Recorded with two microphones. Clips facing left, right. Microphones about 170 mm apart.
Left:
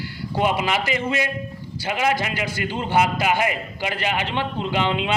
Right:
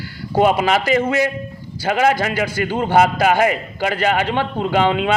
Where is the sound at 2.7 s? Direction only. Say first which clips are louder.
Right 5 dB; 50° right (ahead or behind).